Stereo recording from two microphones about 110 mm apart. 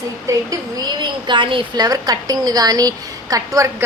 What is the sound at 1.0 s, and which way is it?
Speech, 45° right (ahead or behind).